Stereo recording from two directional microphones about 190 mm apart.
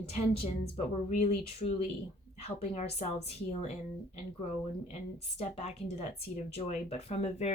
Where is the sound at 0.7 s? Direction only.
40° left (ahead or behind).